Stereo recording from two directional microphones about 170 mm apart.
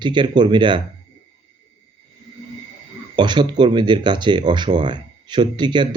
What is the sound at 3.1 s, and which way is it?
Speech, 25° right (ahead or behind).